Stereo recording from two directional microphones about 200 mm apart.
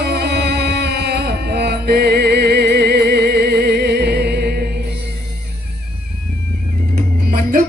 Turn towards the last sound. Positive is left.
turn(degrees=-45)  # may be behind; listen again after turning